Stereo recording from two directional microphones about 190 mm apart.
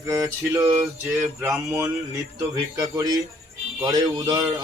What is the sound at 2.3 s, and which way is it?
Speech, 20° right (ahead or behind).